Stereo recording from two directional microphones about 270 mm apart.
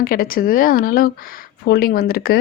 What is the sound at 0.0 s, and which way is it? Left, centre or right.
Speech, left.